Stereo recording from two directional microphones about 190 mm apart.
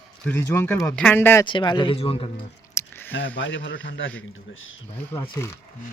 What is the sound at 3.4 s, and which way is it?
Speech, 75° left (ahead or behind).